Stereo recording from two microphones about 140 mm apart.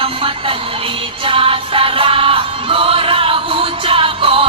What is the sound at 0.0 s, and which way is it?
Music, 40° right (ahead or behind).